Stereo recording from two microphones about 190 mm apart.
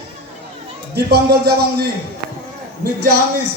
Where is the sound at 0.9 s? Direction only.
55° right (ahead or behind).